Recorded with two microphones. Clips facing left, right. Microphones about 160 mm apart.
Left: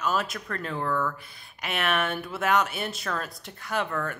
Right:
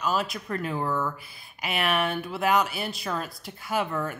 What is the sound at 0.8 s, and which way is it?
Speech, 20° right (ahead or behind).